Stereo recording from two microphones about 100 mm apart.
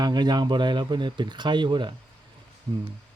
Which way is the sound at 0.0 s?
45° right (ahead or behind).